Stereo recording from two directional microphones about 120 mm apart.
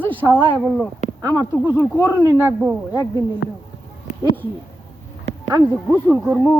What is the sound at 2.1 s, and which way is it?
Speech, 25° right (ahead or behind).